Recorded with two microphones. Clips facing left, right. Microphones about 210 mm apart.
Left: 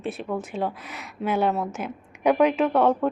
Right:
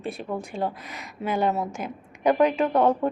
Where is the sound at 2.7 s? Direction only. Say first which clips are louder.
Left 1 dB; 10° right (ahead or behind).